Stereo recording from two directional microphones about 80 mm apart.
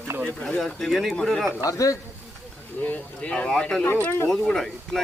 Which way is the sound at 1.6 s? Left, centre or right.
Left.